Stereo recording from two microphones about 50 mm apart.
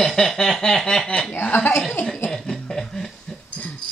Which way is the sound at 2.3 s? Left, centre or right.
Centre.